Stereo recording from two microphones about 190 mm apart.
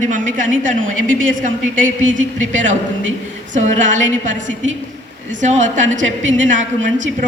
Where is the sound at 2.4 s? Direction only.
40° right (ahead or behind).